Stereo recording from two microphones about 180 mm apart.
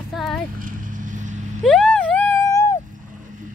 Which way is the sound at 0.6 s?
45° right (ahead or behind).